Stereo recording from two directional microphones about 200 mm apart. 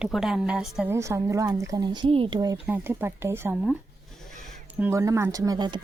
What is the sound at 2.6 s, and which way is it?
Speech, 10° right (ahead or behind).